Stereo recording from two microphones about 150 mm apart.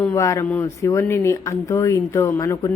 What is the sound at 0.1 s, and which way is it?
A woman's voice, 20° left (ahead or behind).